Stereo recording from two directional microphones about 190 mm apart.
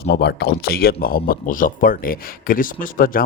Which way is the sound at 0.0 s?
60° left (ahead or behind).